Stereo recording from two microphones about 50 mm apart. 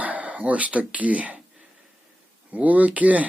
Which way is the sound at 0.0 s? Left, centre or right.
Right.